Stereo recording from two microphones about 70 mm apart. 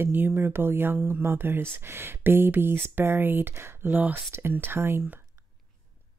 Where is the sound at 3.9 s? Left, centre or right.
Right.